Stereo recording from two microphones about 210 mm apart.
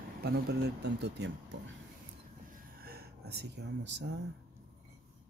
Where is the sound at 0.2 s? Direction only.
50° right (ahead or behind).